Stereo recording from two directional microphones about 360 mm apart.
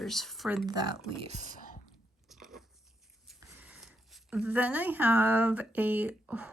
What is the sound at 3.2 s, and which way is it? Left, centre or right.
Speech, centre.